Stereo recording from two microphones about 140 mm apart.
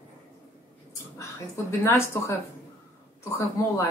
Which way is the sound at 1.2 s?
20° left (ahead or behind).